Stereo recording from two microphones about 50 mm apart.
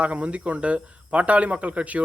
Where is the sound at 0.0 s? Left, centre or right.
Right.